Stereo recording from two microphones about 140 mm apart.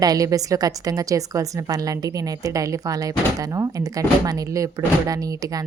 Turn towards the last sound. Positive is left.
turn(degrees=-25)  # may be behind; listen again after turning